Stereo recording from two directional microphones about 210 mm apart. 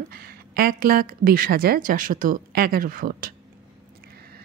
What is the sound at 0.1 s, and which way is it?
A woman's voice, 45° right (ahead or behind).